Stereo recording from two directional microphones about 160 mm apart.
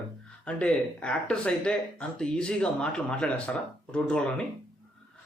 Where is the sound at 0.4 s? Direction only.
5° left (ahead or behind).